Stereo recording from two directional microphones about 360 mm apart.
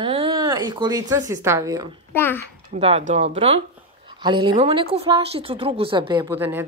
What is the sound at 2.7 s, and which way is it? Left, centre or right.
A woman's voice, centre.